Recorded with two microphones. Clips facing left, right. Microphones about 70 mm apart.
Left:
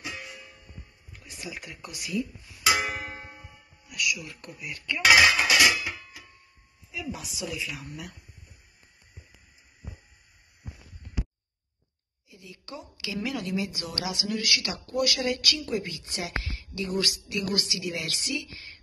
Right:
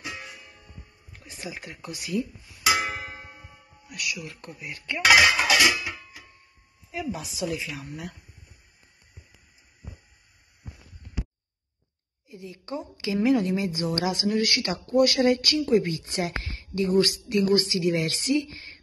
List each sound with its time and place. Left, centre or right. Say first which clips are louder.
1.4 s a woman's voice: right 2 dB; right
2.7 s music: right 1 dB; right
3.9 s speech: left 2 dB; right
5.7 s music: even; centre
6.9 s a woman's voice: right 4 dB; right
12.3 s a woman's voice: right 7 dB; right